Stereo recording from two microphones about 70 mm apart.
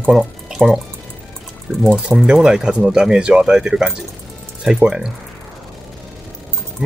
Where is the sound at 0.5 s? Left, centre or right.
Centre.